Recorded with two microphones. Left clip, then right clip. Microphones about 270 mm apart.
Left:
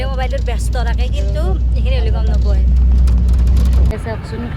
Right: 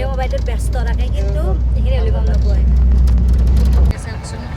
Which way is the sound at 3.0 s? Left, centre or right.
Centre.